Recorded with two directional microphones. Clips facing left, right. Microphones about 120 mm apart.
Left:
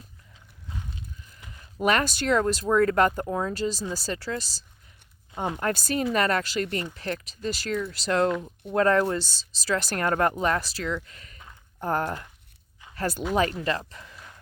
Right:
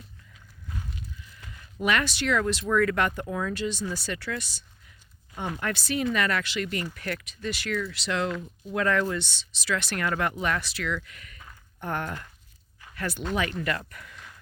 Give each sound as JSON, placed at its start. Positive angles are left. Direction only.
{"t": 1.8, "sound": "speech", "side_deg": 40}